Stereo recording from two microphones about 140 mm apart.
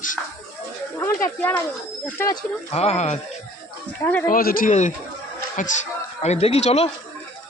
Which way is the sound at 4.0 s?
15° left (ahead or behind).